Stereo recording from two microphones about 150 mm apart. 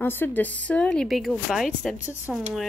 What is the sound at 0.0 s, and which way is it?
Speech, 15° left (ahead or behind).